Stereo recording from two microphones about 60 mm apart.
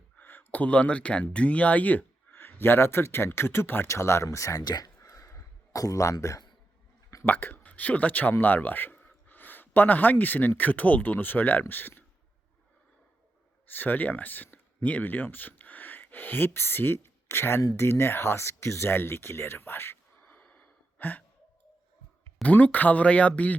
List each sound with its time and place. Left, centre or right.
0.2 s speech: left
7.3 s speech: left
13.7 s speech: left
20.2 s gasp: left
22.4 s speech: left